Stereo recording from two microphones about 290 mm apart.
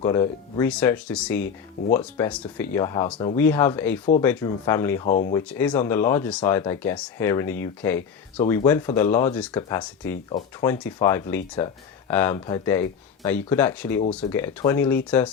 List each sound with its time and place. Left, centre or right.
0.0 s speech: centre
5.0 s speech: left
5.3 s speech: centre